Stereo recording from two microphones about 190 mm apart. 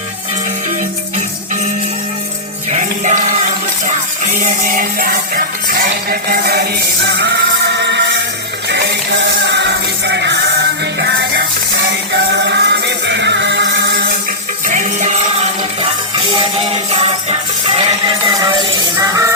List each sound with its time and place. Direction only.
2.6 s music: 40° right (ahead or behind); by 10.3 s 65° right (ahead or behind)
12.5 s music: 65° right (ahead or behind)
14.7 s music: 40° right (ahead or behind); by 19.3 s 15° right (ahead or behind)